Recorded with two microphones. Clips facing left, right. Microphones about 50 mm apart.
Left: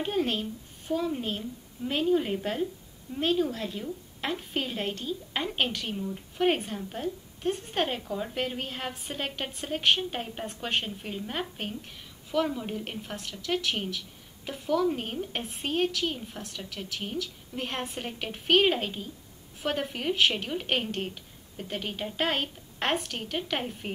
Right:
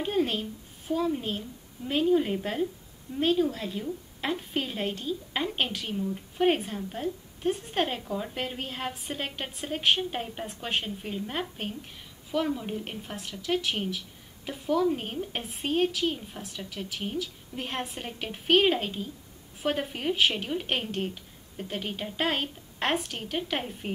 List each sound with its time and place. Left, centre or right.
0.0 s a woman's voice: centre